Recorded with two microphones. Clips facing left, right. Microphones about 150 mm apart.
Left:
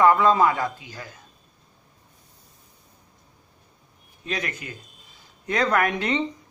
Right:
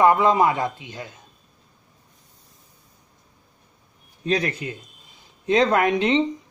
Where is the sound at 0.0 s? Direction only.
20° right (ahead or behind).